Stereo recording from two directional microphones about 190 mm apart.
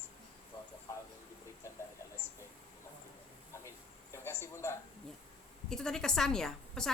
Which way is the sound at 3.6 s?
15° left (ahead or behind).